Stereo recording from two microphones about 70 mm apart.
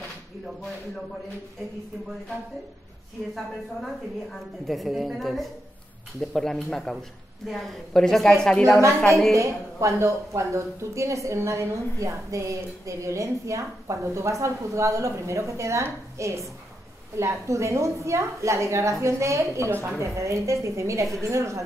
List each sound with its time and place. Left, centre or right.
3.3 s a woman's voice: centre
9.3 s speech: right